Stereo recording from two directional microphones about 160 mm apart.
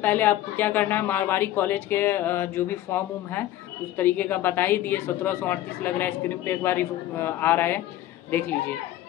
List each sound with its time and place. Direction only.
0.0 s a woman's voice: 10° left (ahead or behind)